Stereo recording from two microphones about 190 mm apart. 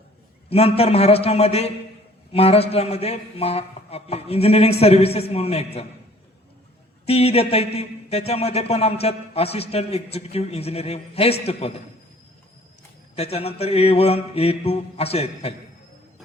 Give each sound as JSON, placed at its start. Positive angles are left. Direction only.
{"t": 0.5, "sound": "a man's voice", "side_deg": 35}
{"t": 7.1, "sound": "a man's voice", "side_deg": 30}
{"t": 13.1, "sound": "a man's voice", "side_deg": 35}